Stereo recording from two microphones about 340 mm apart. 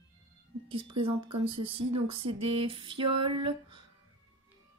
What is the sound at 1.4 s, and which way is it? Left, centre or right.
A woman's voice, centre.